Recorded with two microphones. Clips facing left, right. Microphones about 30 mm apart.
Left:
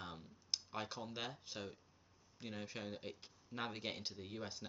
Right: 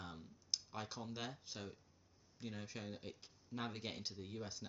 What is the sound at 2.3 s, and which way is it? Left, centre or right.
Speech, centre.